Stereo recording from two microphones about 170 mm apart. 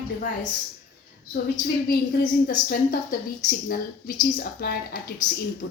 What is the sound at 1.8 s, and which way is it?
Speech, 60° left (ahead or behind).